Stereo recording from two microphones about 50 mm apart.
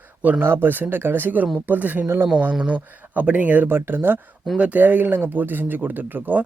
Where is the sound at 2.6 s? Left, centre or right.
Right.